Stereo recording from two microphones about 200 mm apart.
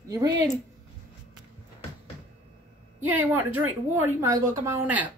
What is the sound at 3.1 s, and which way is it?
Speech, 10° right (ahead or behind).